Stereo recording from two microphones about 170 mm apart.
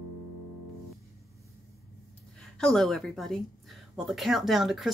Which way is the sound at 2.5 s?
5° left (ahead or behind).